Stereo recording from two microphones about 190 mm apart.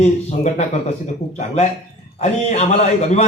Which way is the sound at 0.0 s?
35° left (ahead or behind).